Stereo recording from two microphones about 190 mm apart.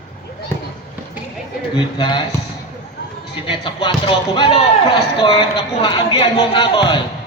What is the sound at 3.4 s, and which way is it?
Speech, 25° left (ahead or behind).